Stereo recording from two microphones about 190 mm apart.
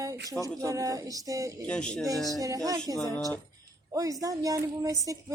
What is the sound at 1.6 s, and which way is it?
Speech, 5° left (ahead or behind).